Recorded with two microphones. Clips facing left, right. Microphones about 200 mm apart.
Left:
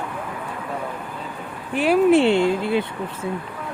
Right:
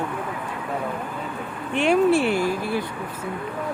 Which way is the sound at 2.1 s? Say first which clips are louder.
Left 4 dB; 25° left (ahead or behind).